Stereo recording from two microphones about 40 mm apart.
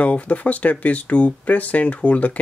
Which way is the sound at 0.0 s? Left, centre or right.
Left.